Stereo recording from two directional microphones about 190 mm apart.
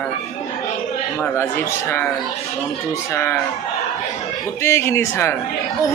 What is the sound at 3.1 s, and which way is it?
Speech, 15° left (ahead or behind).